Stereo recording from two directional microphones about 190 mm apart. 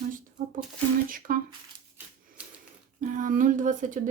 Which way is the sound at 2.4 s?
5° right (ahead or behind).